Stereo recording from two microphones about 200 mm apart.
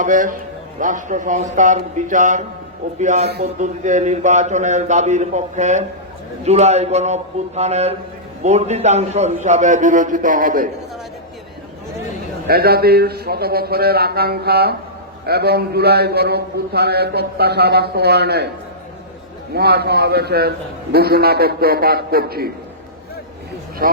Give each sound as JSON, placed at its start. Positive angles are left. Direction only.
{"t": 0.0, "sound": "a man's voice", "side_deg": -40}
{"t": 12.5, "sound": "a man's voice", "side_deg": -50}
{"t": 19.5, "sound": "a man's voice", "side_deg": -55}
{"t": 23.8, "sound": "speech", "side_deg": -45}